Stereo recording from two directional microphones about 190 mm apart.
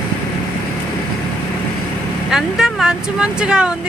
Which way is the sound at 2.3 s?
5° right (ahead or behind).